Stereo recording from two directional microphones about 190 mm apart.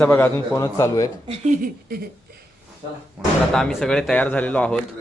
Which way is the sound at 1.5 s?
50° right (ahead or behind).